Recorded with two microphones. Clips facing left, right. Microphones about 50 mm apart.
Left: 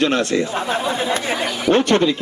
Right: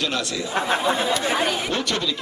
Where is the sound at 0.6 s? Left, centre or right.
Centre.